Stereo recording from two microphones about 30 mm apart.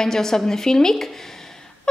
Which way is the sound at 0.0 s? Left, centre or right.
Centre.